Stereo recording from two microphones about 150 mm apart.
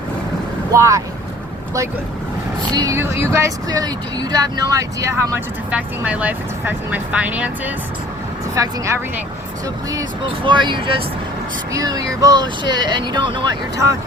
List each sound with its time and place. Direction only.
0.7 s speech: 20° right (ahead or behind)
2.7 s speech: 20° right (ahead or behind)
5.7 s speech: 10° right (ahead or behind)
8.5 s speech: 20° right (ahead or behind)